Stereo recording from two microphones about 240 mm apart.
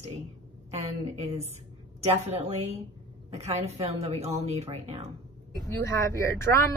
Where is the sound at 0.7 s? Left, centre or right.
Right.